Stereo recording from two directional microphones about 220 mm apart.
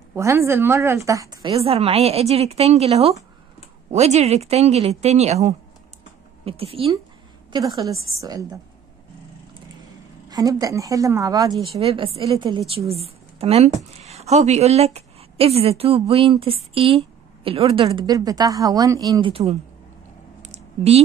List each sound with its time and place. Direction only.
0.1 s a woman's voice: 10° right (ahead or behind)
10.2 s a woman's voice: 15° right (ahead or behind)
11.8 s a woman's voice: 25° right (ahead or behind)
20.4 s a sound: 30° right (ahead or behind)